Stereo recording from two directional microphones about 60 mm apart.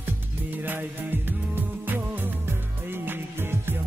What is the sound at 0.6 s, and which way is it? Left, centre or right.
Music, right.